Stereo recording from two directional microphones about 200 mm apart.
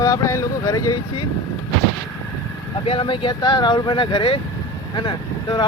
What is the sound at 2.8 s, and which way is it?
Speech, 25° left (ahead or behind).